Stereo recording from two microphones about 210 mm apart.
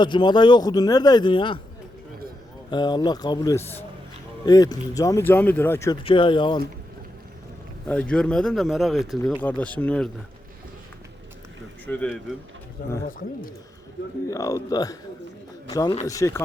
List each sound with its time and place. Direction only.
0.0 s a man's voice: 20° left (ahead or behind)
2.6 s a man's voice: 20° left (ahead or behind)
6.0 s a man's voice: 25° left (ahead or behind)
7.9 s speech: 5° left (ahead or behind)
11.9 s speech: 5° left (ahead or behind)
13.1 s speech: 40° left (ahead or behind)
14.3 s speech: 15° left (ahead or behind)